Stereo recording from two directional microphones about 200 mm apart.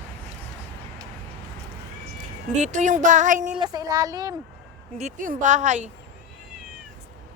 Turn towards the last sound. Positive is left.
turn(degrees=-35)  # may be behind; listen again after turning